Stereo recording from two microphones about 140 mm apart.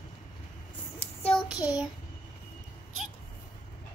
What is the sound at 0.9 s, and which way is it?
Child singing, 45° left (ahead or behind).